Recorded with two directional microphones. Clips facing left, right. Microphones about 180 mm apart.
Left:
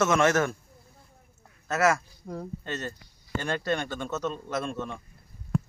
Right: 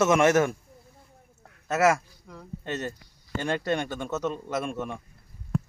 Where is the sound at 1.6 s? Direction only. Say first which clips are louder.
Right 2 dB; 20° right (ahead or behind).